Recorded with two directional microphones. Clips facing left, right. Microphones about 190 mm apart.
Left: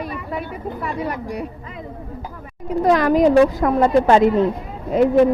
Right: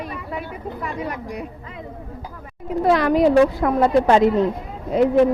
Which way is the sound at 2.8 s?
45° left (ahead or behind).